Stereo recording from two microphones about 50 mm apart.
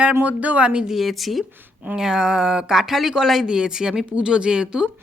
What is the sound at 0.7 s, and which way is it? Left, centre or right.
Speech, centre.